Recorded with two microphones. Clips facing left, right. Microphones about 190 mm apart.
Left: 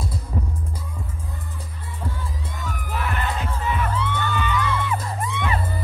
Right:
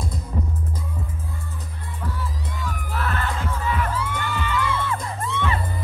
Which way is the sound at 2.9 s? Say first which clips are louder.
Left 1 dB; 15° left (ahead or behind).